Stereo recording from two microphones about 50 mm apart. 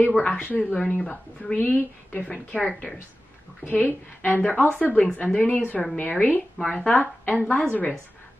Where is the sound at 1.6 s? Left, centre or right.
Left.